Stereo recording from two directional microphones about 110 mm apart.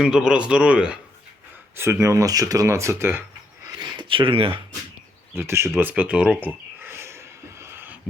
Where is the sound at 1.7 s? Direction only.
25° right (ahead or behind).